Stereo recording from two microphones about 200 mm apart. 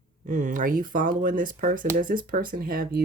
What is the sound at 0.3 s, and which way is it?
Speech, 40° right (ahead or behind).